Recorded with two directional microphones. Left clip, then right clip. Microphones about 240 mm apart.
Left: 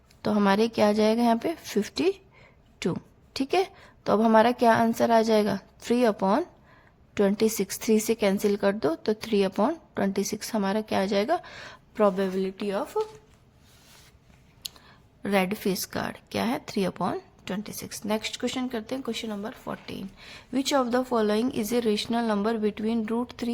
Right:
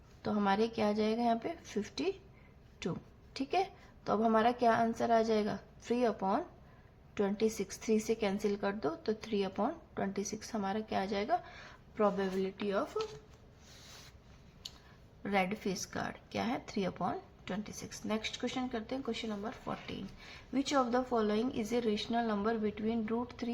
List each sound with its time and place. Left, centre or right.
0.2 s a woman's voice: left
15.2 s speech: left